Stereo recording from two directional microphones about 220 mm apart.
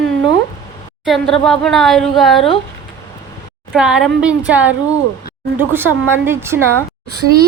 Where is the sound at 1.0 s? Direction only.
Centre (ahead or behind).